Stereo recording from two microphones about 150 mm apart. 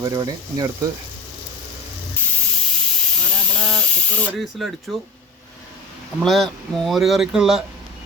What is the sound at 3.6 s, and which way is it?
Spray, 5° left (ahead or behind).